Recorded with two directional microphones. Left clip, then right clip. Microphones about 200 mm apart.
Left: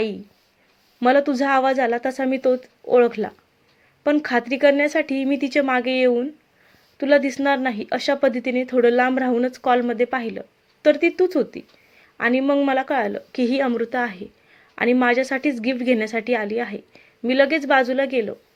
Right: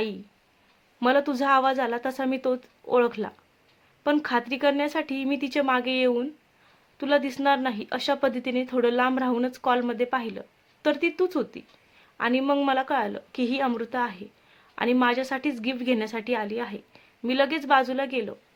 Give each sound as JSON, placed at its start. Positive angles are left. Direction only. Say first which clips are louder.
{"t": 0.9, "sound": "a woman's voice", "louder": "left 5 dB", "side_deg": 5}